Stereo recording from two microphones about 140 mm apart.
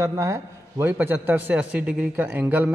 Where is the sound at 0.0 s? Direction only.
20° right (ahead or behind).